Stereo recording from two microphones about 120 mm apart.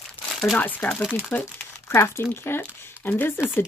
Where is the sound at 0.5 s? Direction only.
15° left (ahead or behind).